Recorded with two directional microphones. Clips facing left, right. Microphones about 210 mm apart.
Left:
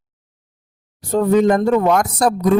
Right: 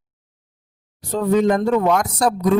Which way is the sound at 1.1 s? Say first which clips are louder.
Left 3 dB; 50° left (ahead or behind).